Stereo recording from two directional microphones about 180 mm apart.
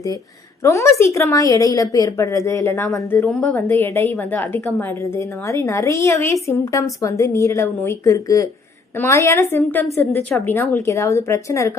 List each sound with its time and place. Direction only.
0.6 s a woman's voice: 15° left (ahead or behind)